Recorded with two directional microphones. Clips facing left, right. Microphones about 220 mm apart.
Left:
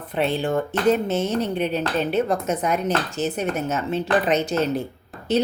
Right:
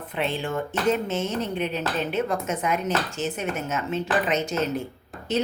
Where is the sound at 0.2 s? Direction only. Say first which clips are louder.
Left 5 dB; 35° left (ahead or behind).